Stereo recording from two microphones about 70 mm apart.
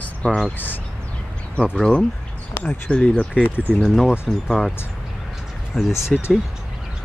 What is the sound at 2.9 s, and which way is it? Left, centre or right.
Speech, centre.